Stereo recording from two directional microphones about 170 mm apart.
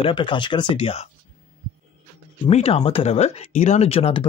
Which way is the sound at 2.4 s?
35° left (ahead or behind).